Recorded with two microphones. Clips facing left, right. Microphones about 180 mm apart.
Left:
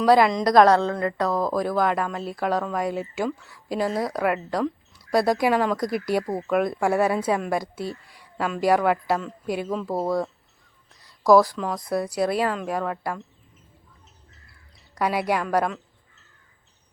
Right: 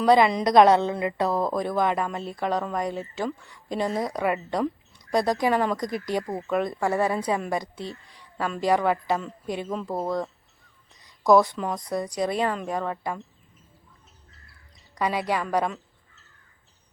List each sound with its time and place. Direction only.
0.0 s speech: centre (ahead or behind)
0.7 s a woman's voice: 20° right (ahead or behind)
1.3 s speech: centre (ahead or behind)
11.3 s speech: centre (ahead or behind)
14.9 s speech: 10° left (ahead or behind)